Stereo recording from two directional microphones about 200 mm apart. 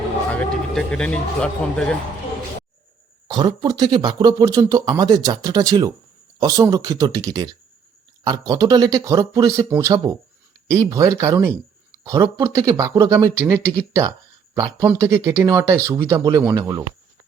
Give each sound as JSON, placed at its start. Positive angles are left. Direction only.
{"t": 0.3, "sound": "speech", "side_deg": 5}
{"t": 3.2, "sound": "speech", "side_deg": -20}